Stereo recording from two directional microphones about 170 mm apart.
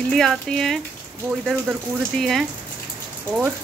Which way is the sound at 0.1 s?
5° left (ahead or behind).